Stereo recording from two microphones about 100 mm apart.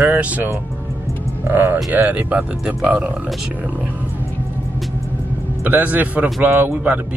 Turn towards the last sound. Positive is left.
turn(degrees=-20)  # may be behind; listen again after turning